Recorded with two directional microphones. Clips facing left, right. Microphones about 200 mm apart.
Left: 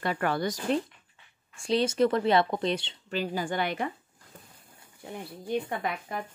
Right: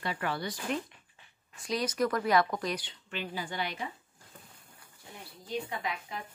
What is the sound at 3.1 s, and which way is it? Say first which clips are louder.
Speech: left 7 dB; 40° left (ahead or behind).